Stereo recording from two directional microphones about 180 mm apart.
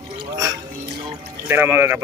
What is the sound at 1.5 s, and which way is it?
Speech, 10° right (ahead or behind).